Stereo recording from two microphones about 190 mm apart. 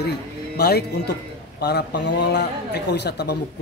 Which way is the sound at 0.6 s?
60° left (ahead or behind).